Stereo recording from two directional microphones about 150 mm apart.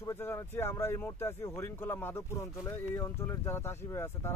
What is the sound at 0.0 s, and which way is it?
Speech, 15° left (ahead or behind).